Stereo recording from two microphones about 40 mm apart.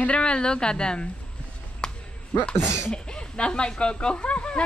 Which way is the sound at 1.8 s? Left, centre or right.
Centre.